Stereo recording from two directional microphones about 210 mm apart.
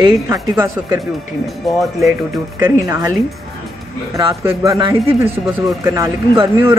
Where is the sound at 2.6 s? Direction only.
15° right (ahead or behind).